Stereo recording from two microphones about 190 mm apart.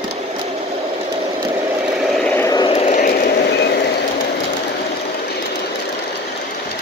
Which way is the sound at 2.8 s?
40° left (ahead or behind).